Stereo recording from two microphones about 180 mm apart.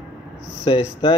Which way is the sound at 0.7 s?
30° left (ahead or behind).